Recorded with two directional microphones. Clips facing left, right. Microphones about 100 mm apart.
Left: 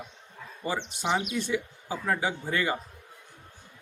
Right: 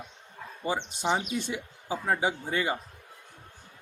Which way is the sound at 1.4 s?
25° right (ahead or behind).